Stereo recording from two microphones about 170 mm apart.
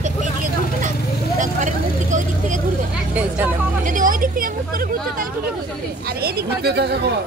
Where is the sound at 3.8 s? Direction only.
50° right (ahead or behind).